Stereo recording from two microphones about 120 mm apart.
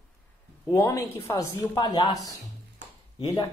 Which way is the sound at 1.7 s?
40° left (ahead or behind).